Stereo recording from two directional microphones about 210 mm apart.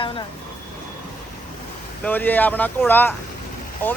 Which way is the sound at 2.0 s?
10° left (ahead or behind).